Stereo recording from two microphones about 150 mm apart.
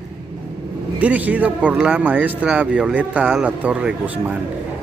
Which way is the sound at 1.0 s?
10° right (ahead or behind).